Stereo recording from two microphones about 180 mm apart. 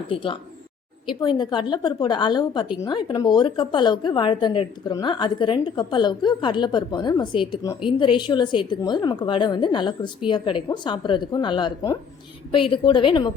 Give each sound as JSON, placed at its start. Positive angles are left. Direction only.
{"t": 0.1, "sound": "a woman's voice", "side_deg": 30}